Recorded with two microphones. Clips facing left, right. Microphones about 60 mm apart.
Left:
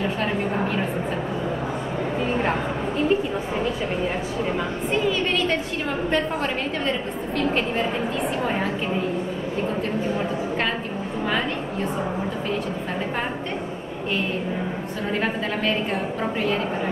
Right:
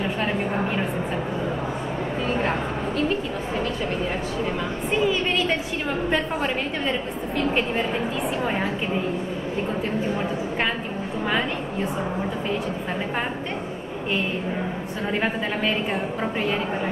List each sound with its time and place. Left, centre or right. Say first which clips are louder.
5.0 s a woman's voice: right 2 dB; centre
15.1 s a woman's voice: even; centre